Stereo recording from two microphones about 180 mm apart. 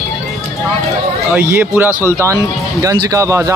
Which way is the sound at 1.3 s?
10° right (ahead or behind).